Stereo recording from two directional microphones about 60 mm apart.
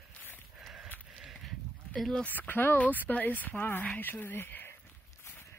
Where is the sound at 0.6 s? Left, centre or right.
Centre.